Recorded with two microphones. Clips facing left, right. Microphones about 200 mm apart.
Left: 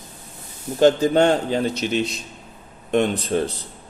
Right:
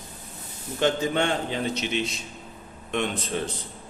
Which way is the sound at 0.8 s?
40° left (ahead or behind).